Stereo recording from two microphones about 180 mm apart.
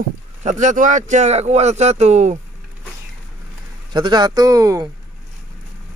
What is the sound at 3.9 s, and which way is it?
Speech, 25° right (ahead or behind).